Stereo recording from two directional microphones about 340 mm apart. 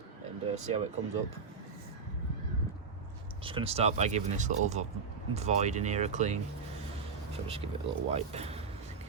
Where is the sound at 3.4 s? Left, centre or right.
Centre.